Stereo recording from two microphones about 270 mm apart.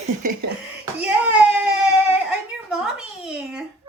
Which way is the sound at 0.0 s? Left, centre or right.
Right.